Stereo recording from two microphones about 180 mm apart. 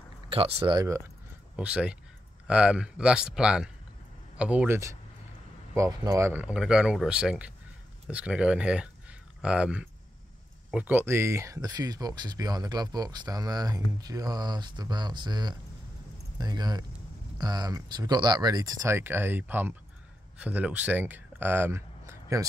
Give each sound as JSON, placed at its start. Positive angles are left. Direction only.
{"t": 0.3, "sound": "speech", "side_deg": -30}
{"t": 1.6, "sound": "speech", "side_deg": -5}